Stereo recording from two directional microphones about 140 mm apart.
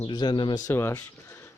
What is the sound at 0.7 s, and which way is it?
Speech, 20° left (ahead or behind).